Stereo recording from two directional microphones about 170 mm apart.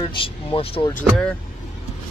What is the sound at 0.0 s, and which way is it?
Speech, 30° left (ahead or behind).